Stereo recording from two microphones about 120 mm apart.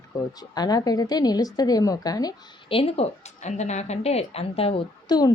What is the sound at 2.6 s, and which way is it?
A woman's voice, 55° left (ahead or behind).